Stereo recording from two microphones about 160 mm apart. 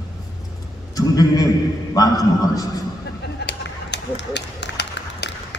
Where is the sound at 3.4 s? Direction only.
90° left.